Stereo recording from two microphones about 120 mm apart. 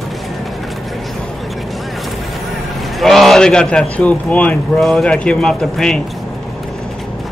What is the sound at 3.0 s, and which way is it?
A man's voice, centre (ahead or behind).